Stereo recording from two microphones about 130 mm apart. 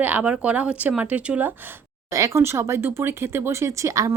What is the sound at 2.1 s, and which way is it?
Speech, 25° right (ahead or behind).